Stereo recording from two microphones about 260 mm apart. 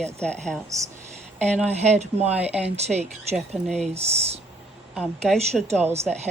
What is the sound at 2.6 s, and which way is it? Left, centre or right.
Speech, right.